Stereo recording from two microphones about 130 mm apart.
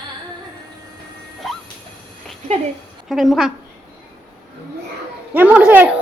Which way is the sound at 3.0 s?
Centre (ahead or behind).